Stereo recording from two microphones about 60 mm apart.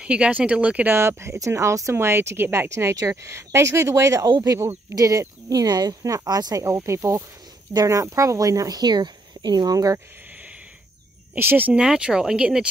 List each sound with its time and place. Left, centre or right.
0.0 s speech: centre
0.8 s speech: right
1.4 s speech: right
2.7 s speech: right
5.5 s speech: right
6.8 s speech: right
7.7 s speech: right
11.3 s speech: right
11.7 s speech: centre